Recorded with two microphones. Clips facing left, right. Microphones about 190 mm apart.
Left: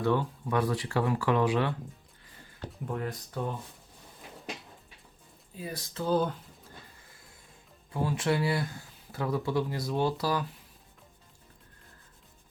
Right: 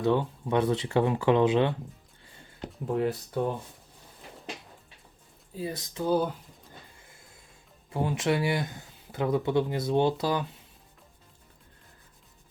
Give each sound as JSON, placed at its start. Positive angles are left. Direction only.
{"t": 0.0, "sound": "speech", "side_deg": -20}
{"t": 5.5, "sound": "speech", "side_deg": -25}
{"t": 8.0, "sound": "speech", "side_deg": -20}